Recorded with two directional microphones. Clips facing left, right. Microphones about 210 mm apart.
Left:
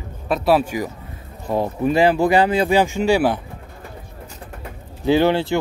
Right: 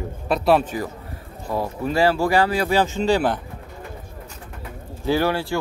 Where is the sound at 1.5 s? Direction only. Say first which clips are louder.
Left 4 dB; 20° left (ahead or behind).